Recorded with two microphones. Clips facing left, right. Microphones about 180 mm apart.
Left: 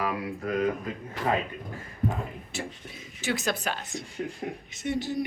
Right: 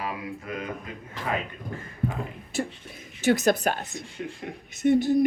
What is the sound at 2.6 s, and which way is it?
Speech, 50° right (ahead or behind).